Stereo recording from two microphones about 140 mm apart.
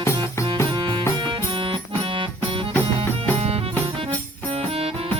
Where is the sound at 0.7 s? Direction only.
35° right (ahead or behind).